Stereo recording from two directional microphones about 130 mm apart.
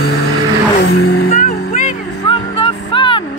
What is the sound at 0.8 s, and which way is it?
Vehicle, 90° left.